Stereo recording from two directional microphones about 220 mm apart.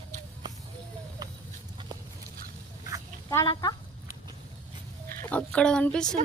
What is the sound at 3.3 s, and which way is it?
Speech, 15° left (ahead or behind).